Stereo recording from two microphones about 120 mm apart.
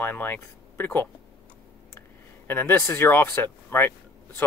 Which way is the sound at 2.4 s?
15° left (ahead or behind).